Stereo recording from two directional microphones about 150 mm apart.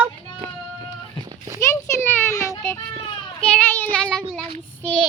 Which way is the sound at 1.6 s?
15° left (ahead or behind).